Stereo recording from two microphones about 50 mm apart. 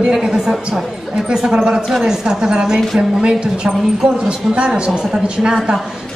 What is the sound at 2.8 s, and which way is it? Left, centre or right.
Speech, centre.